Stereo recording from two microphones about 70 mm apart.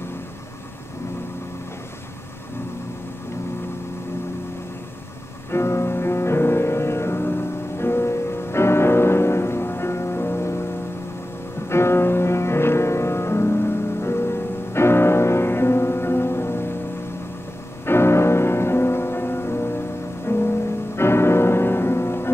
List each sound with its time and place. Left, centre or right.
5.5 s music: left
11.7 s music: left
17.8 s music: left